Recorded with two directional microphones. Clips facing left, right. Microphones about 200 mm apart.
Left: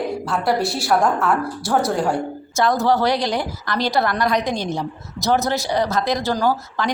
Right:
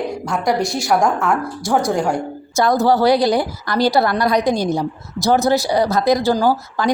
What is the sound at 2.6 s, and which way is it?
A woman's voice, 35° right (ahead or behind).